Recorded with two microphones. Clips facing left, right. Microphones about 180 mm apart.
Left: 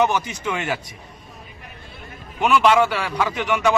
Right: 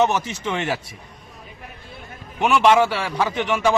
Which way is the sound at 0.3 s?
25° right (ahead or behind).